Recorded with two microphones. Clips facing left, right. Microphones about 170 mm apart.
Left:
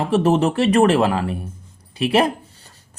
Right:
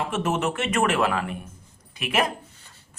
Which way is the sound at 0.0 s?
35° left (ahead or behind).